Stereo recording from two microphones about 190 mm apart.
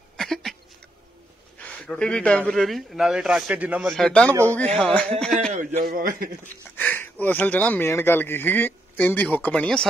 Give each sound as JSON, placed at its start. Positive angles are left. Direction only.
{"t": 0.2, "sound": "a sound", "side_deg": 0}
{"t": 1.6, "sound": "speech", "side_deg": 5}
{"t": 5.5, "sound": "a man's voice", "side_deg": -35}
{"t": 5.8, "sound": "a man's voice", "side_deg": -50}
{"t": 6.4, "sound": "speech", "side_deg": 10}